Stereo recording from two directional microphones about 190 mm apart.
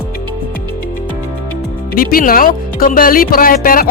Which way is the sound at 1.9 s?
50° left (ahead or behind).